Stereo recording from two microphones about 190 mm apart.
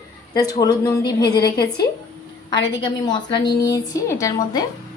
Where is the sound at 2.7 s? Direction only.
20° left (ahead or behind).